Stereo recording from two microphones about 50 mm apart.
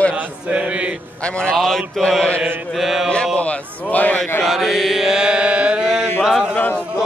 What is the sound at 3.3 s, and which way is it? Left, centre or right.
Speech, left.